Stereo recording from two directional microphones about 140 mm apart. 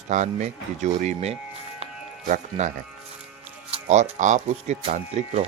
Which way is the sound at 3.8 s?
60° right (ahead or behind).